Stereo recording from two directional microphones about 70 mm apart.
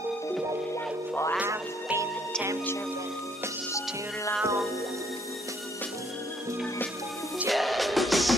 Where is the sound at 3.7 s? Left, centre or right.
Left.